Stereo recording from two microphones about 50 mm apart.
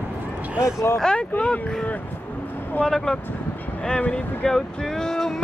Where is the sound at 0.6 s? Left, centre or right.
Left.